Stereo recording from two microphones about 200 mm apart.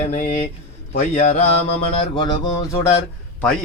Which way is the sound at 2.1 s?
25° left (ahead or behind).